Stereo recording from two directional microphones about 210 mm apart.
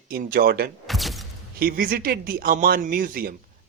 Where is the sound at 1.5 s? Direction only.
45° right (ahead or behind).